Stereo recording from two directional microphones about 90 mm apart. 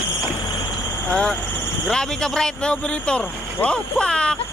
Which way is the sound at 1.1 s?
10° left (ahead or behind).